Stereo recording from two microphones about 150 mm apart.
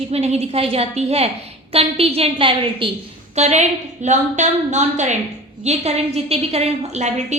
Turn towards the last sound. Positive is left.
turn(degrees=-50)  # may be behind; listen again after turning